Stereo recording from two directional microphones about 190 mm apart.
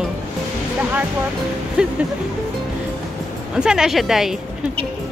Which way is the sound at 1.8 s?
5° right (ahead or behind).